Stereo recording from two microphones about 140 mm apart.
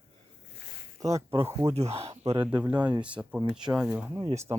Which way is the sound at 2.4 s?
10° right (ahead or behind).